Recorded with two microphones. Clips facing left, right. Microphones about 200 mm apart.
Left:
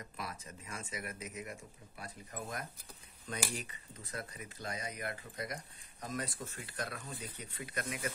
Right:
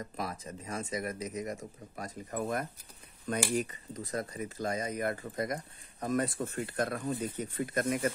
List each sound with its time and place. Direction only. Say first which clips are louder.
0.2 s speech: right 6 dB; 40° right (ahead or behind)